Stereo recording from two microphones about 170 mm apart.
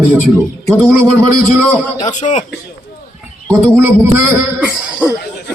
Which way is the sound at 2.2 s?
45° left (ahead or behind).